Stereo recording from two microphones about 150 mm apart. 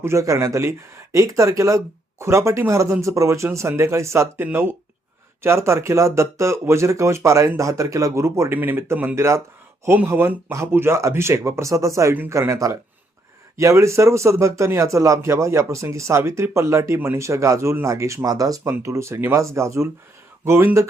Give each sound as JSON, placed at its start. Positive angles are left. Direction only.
{"t": 0.0, "sound": "speech", "side_deg": -20}